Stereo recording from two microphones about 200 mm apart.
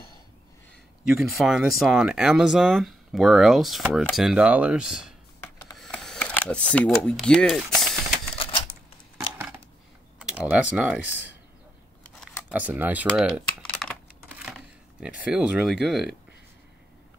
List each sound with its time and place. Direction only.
1.0 s speech: centre (ahead or behind)
5.4 s a sound: 10° left (ahead or behind)
5.8 s camera: 5° left (ahead or behind)
8.4 s typewriter: 25° left (ahead or behind)
10.1 s speech: 5° right (ahead or behind)
12.4 s speech: 5° right (ahead or behind)
13.1 s typing: centre (ahead or behind)
15.0 s speech: 5° right (ahead or behind)